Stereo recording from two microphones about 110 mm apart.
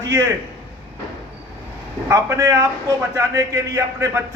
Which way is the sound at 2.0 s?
25° right (ahead or behind).